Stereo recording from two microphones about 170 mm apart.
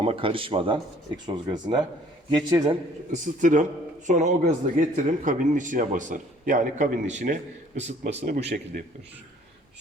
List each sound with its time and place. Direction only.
0.0 s a man's voice: 30° right (ahead or behind)
3.1 s a man's voice: 45° right (ahead or behind)
8.5 s a man's voice: 55° right (ahead or behind)